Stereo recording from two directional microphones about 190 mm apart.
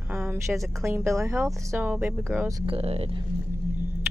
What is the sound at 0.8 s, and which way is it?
Speech, 15° right (ahead or behind).